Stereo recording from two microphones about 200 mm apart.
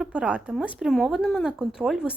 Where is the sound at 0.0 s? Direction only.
5° right (ahead or behind).